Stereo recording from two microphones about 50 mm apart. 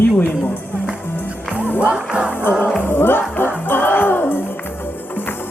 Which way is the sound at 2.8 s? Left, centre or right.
Left.